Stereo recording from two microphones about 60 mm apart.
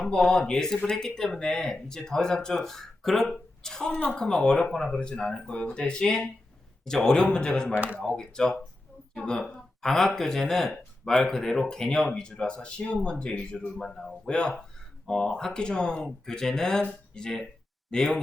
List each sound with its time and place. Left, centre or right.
0.0 s speech: centre